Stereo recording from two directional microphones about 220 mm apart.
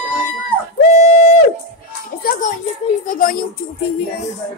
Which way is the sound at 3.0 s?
40° left (ahead or behind).